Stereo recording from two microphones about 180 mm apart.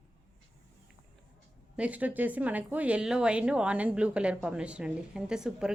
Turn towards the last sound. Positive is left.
turn(degrees=-5)  # may be behind; listen again after turning